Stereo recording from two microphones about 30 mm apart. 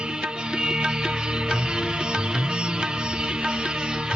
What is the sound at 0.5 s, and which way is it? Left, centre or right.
Music, right.